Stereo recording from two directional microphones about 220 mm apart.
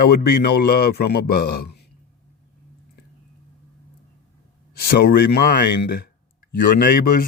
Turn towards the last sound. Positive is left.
turn(degrees=40)  # may be behind; listen again after turning